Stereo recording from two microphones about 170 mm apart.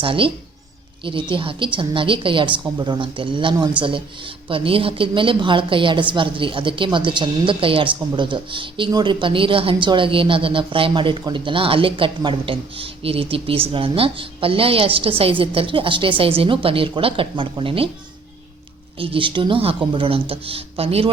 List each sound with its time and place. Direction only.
0.0 s a woman's voice: 30° right (ahead or behind)
18.9 s a woman's voice: 30° right (ahead or behind)